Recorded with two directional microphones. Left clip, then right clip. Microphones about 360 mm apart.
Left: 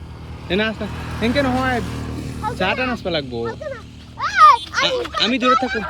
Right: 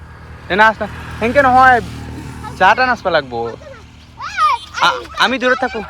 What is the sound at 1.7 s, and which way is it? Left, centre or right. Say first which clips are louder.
Vehicle: right 9 dB; centre.